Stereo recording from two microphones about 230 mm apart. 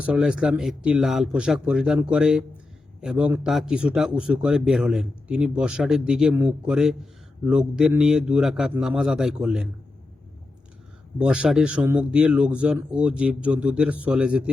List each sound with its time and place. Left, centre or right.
0.0 s a man's voice: centre
11.2 s a man's voice: centre